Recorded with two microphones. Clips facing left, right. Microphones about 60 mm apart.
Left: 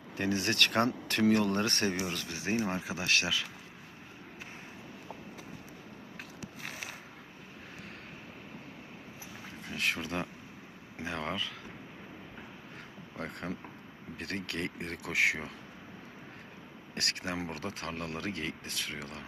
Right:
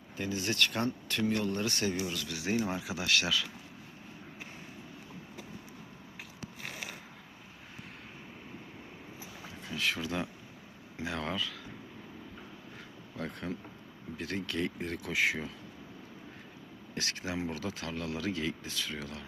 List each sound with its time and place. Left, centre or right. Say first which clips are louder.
0.2 s speech: left 2 dB; left
0.9 s speech: left 4 dB; left
9.6 s speech: even; left
11.0 s a sound: right 1 dB; left
13.1 s speech: even; left
14.2 s speech: right 2 dB; left
16.9 s speech: even; left
17.5 s speech: right 1 dB; left